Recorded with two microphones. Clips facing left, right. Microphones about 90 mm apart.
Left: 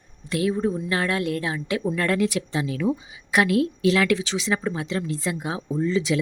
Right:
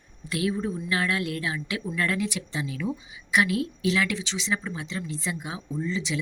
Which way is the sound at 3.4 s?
60° left (ahead or behind).